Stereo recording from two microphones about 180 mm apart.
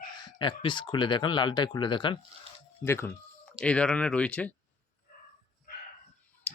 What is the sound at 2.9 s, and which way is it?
Speech, 15° left (ahead or behind).